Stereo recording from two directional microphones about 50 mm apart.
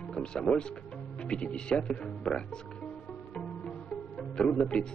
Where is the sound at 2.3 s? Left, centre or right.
Centre.